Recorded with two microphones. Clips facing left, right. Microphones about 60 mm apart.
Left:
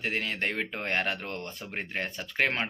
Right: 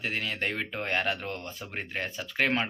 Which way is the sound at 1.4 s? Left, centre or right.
Left.